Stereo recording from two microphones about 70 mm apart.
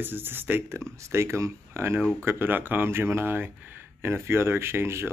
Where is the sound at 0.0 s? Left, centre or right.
Right.